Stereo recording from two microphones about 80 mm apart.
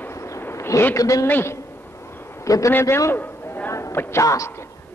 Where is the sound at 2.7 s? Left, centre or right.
Left.